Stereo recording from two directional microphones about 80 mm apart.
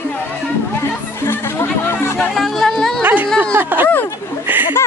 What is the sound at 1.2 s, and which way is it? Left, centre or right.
Music, left.